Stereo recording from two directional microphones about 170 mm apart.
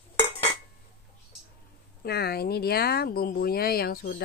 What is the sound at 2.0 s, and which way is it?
Speech, 70° left (ahead or behind).